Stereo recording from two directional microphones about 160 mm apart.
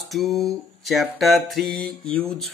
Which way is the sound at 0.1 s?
Centre (ahead or behind).